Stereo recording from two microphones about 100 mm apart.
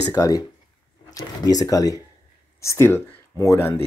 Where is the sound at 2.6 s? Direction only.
25° left (ahead or behind).